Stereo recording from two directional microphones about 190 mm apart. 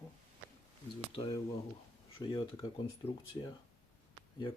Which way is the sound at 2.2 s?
25° left (ahead or behind).